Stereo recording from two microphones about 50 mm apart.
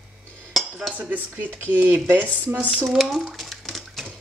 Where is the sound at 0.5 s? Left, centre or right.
Centre.